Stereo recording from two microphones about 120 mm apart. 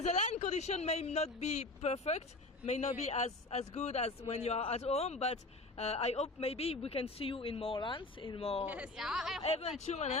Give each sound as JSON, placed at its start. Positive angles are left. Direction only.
{"t": 0.0, "sound": "a man's voice", "side_deg": 75}
{"t": 8.6, "sound": "speech", "side_deg": -10}
{"t": 9.4, "sound": "a man's voice", "side_deg": 60}